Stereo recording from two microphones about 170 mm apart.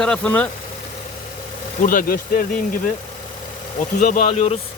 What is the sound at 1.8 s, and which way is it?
Speech, 55° left (ahead or behind).